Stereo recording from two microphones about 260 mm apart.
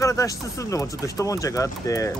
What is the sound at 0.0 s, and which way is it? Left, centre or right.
Speech, centre.